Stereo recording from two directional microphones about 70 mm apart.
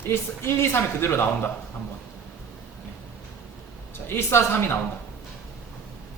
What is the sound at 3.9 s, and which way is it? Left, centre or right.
Speech, left.